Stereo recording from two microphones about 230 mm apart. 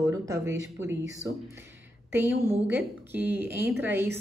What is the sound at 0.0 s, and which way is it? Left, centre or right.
Speech, centre.